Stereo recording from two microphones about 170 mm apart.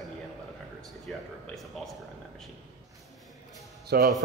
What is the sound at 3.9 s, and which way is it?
Speech, 65° right (ahead or behind).